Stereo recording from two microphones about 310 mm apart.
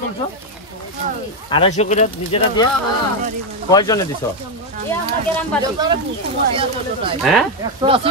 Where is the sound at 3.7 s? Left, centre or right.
Centre.